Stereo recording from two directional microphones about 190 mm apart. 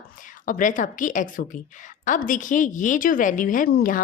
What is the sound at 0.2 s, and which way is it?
A woman's voice, 45° left (ahead or behind).